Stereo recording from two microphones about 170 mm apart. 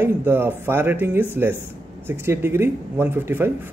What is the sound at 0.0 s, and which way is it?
A man's voice, 15° right (ahead or behind).